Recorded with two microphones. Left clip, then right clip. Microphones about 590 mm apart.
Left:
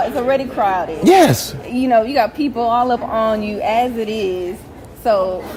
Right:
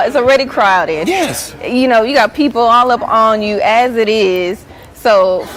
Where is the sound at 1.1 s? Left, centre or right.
Left.